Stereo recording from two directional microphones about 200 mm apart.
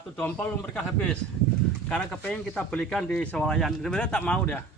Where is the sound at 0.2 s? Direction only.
10° left (ahead or behind).